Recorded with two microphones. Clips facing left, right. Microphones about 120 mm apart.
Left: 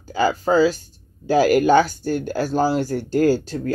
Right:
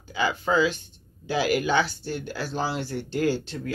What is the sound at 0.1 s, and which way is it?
Speech, 40° left (ahead or behind).